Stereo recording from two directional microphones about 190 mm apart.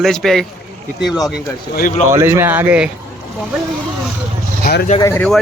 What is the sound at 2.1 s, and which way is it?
Speech, 15° right (ahead or behind).